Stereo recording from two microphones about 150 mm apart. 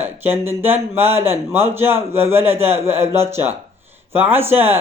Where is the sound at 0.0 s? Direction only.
15° right (ahead or behind).